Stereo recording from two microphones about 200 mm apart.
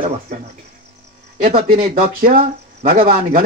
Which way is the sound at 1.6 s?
45° right (ahead or behind).